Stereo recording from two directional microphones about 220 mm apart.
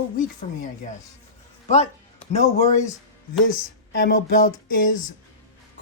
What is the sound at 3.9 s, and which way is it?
Speech, 45° left (ahead or behind).